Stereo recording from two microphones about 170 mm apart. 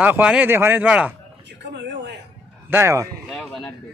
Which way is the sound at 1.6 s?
90° right.